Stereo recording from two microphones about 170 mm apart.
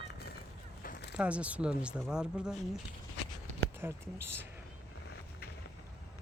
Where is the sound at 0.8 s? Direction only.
65° left (ahead or behind).